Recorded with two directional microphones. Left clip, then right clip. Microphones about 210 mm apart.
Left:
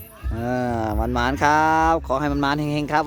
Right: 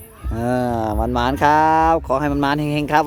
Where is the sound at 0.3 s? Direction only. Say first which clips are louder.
Right 4 dB; 15° right (ahead or behind).